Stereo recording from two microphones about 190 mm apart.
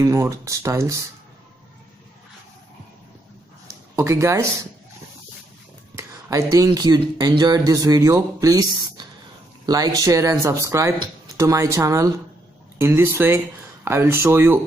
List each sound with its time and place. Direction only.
0.0 s speech: 15° right (ahead or behind)
3.9 s speech: 15° right (ahead or behind)
5.9 s speech: 15° right (ahead or behind)